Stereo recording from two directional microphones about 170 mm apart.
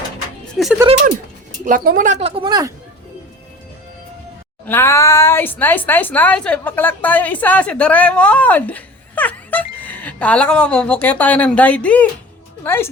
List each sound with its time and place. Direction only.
0.6 s speech: centre (ahead or behind)
1.6 s a woman's voice: 55° right (ahead or behind); by 2.7 s 25° right (ahead or behind)
4.6 s a woman's voice: 15° left (ahead or behind)